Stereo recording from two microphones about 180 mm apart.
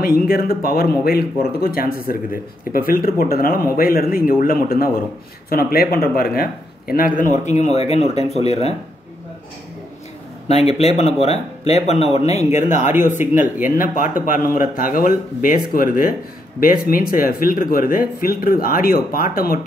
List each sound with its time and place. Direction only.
0.0 s speech: 55° left (ahead or behind)
7.4 s speech: 40° left (ahead or behind)
10.5 s speech: 35° left (ahead or behind); by 19.6 s 55° left (ahead or behind)